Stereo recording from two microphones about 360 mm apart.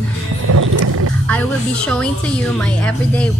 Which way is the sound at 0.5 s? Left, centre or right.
Right.